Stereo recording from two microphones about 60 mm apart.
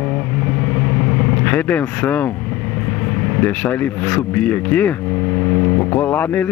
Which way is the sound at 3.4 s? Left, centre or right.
Left.